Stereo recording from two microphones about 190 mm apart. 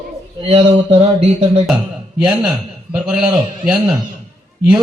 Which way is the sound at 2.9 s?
5° right (ahead or behind).